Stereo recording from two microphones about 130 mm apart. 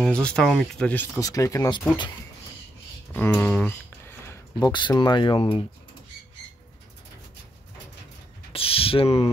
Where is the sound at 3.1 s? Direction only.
15° left (ahead or behind).